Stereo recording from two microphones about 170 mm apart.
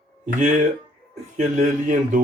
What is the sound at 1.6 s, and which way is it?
Speech, 50° right (ahead or behind).